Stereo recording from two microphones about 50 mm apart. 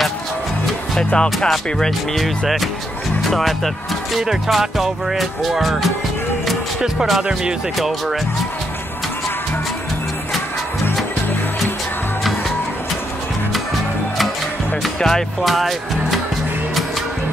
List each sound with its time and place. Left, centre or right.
0.9 s speech: centre
1.5 s speech: centre
7.1 s speech: centre
7.7 s speech: centre
12.2 s music: centre
15.0 s speech: centre
15.4 s speech: centre